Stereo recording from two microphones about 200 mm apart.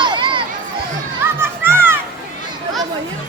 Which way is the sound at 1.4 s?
10° right (ahead or behind).